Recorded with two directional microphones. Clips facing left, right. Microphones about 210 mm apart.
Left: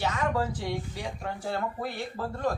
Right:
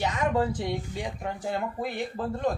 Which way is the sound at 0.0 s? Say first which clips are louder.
Right 2 dB; 20° right (ahead or behind).